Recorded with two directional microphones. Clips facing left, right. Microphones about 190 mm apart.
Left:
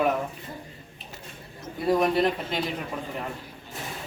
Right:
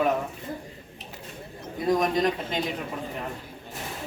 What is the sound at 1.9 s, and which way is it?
Speech, 5° left (ahead or behind).